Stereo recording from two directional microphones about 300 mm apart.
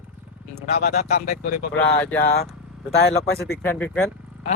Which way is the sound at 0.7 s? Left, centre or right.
Left.